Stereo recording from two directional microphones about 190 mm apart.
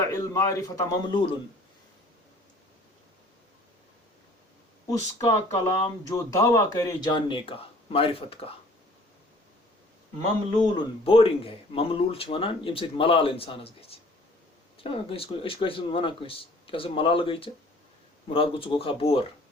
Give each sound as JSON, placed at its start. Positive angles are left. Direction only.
{"t": 0.0, "sound": "a man's voice", "side_deg": 15}
{"t": 4.9, "sound": "a man's voice", "side_deg": 15}
{"t": 10.2, "sound": "a man's voice", "side_deg": 20}